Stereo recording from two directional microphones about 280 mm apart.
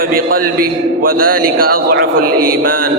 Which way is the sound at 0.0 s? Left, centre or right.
Right.